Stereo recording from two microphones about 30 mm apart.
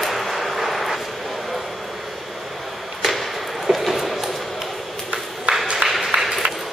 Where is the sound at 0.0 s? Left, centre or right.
Centre.